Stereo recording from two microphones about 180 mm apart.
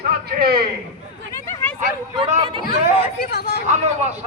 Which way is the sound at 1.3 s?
10° left (ahead or behind).